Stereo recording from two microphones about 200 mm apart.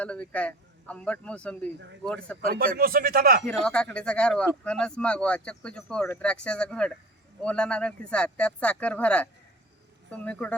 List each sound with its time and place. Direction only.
0.0 s speech: 5° left (ahead or behind)
2.5 s speech: 50° right (ahead or behind)
3.4 s speech: 5° left (ahead or behind)